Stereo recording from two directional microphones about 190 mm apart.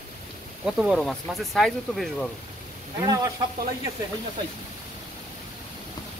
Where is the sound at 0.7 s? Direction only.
Centre (ahead or behind).